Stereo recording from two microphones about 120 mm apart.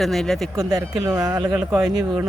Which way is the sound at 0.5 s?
30° right (ahead or behind).